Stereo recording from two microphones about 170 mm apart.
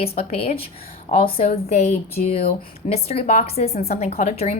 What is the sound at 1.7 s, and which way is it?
Speech, 40° left (ahead or behind).